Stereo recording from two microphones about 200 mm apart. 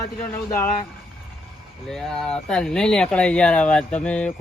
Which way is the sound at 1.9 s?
Centre (ahead or behind).